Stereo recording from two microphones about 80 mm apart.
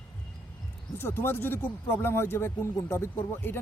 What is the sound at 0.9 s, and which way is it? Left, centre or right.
Speech, left.